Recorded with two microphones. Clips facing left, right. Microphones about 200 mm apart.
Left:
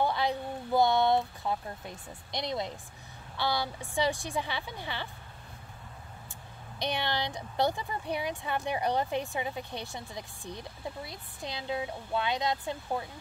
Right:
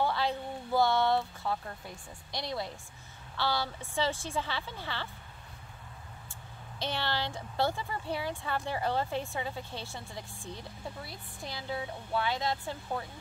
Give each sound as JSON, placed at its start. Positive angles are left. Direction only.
{"t": 0.0, "sound": "speech", "side_deg": 15}
{"t": 6.8, "sound": "speech", "side_deg": 15}